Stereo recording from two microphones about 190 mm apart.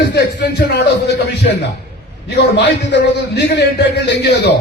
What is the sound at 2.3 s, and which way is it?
A man's voice, 65° left (ahead or behind).